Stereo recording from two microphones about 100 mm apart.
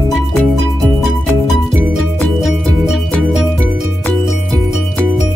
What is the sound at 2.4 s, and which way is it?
Music, centre (ahead or behind).